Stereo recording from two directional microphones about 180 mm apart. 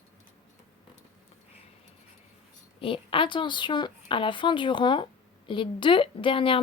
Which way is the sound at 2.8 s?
30° left (ahead or behind).